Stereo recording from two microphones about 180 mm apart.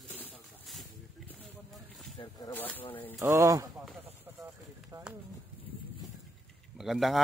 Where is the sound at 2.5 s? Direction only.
10° left (ahead or behind).